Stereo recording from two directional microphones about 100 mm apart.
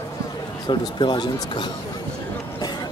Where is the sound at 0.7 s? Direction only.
50° left (ahead or behind).